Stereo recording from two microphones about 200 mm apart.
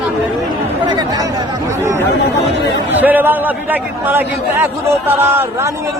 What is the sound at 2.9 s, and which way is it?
A man's voice, 10° right (ahead or behind).